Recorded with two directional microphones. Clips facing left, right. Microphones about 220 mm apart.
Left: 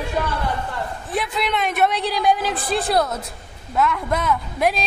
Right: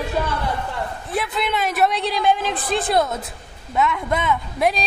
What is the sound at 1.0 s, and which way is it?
A woman's voice, centre (ahead or behind).